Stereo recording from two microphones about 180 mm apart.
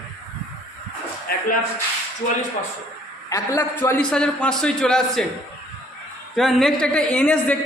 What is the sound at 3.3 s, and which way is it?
A woman's voice, 20° left (ahead or behind).